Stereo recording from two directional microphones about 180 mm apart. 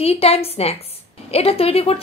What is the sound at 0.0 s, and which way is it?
A woman's voice, 35° left (ahead or behind).